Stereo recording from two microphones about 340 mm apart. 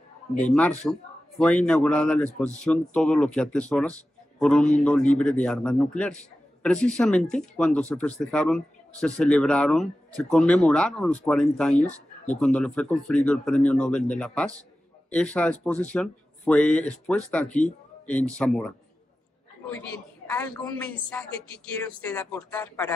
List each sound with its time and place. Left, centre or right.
0.5 s speech: centre
11.7 s speech: left
12.4 s speech: centre
20.2 s a woman's voice: centre